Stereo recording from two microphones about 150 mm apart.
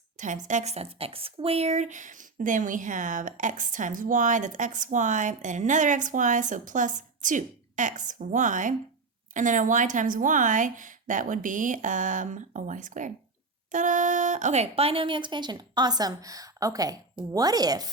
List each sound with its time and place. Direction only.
0.4 s speech: 50° right (ahead or behind); by 17.9 s 25° right (ahead or behind)